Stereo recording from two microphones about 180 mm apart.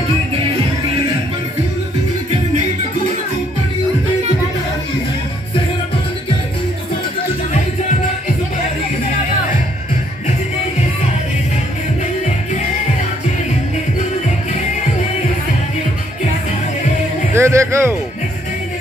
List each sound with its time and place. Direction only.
17.3 s music: 15° right (ahead or behind)